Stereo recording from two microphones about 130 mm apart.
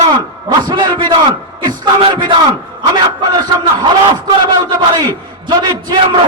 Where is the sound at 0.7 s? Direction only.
30° right (ahead or behind).